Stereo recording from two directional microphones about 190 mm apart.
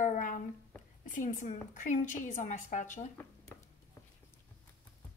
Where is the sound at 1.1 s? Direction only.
40° left (ahead or behind).